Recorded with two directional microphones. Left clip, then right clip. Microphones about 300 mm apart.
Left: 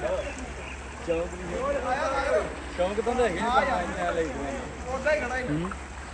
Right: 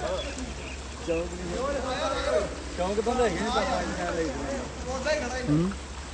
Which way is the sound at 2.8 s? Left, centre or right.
Right.